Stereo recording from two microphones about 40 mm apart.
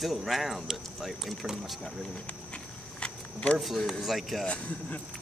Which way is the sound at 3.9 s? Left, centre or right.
Centre.